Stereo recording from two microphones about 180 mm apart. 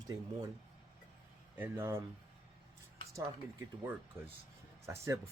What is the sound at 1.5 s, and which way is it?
Speech, 10° right (ahead or behind).